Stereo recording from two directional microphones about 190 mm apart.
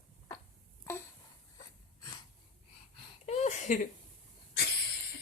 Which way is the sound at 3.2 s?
35° left (ahead or behind).